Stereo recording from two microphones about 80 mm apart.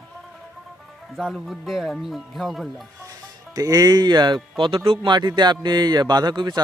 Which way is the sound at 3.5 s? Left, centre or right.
Right.